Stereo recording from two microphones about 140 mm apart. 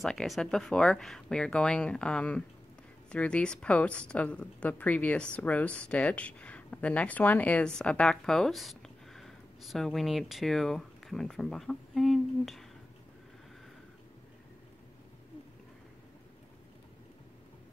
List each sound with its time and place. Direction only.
0.0 s a woman's voice: 5° left (ahead or behind)